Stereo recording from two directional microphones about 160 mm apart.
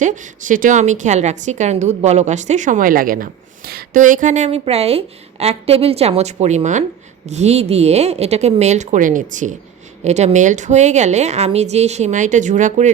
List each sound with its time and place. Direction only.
0.0 s a woman's voice: 50° right (ahead or behind); by 4.0 s 70° right (ahead or behind)
4.0 s a woman's voice: 55° right (ahead or behind)